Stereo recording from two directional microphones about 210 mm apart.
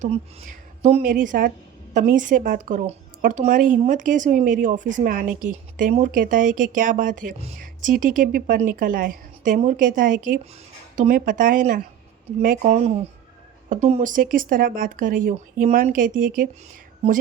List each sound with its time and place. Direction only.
0.8 s speech: 35° right (ahead or behind)